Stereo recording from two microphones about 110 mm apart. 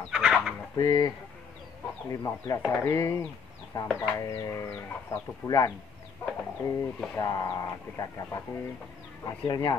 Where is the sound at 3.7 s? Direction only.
40° left (ahead or behind).